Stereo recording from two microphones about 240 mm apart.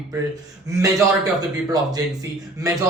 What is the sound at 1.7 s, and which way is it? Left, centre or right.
Speech, centre.